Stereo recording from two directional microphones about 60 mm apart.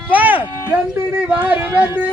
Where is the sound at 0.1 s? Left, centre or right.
Right.